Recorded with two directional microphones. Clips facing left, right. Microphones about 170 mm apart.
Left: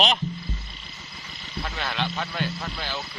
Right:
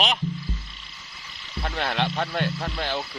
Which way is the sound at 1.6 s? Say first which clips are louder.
Right 4 dB; 55° right (ahead or behind).